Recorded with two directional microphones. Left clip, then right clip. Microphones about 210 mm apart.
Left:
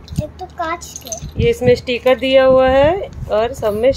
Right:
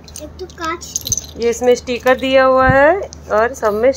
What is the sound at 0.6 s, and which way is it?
Speech, 40° left (ahead or behind).